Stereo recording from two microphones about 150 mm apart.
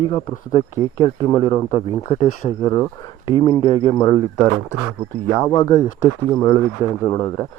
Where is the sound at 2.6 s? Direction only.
25° left (ahead or behind).